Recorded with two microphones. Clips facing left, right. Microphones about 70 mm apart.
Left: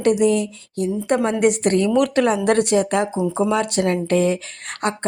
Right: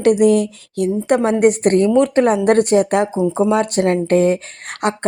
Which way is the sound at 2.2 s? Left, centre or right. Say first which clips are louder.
Right 4 dB; right.